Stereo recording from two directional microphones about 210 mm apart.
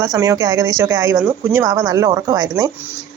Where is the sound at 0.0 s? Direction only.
15° right (ahead or behind).